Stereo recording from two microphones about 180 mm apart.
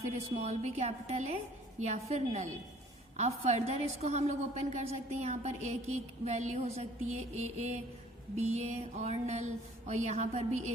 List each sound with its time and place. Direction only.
0.0 s music: 40° right (ahead or behind)